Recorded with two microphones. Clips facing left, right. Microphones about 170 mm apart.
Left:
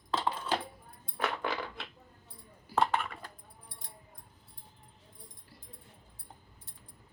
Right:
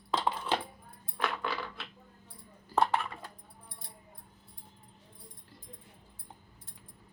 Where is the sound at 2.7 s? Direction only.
10° left (ahead or behind).